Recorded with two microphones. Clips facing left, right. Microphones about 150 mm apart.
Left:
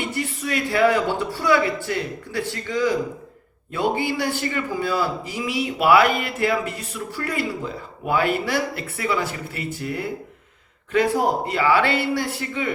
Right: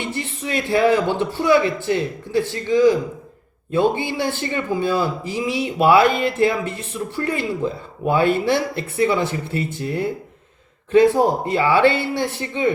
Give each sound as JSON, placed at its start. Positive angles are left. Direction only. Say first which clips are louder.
{"t": 0.2, "sound": "a man's voice", "louder": "left 1 dB", "side_deg": -25}
{"t": 10.9, "sound": "a man's voice", "louder": "right 5 dB", "side_deg": -20}